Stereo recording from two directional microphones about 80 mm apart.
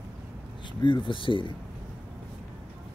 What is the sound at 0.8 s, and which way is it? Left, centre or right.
Speech, left.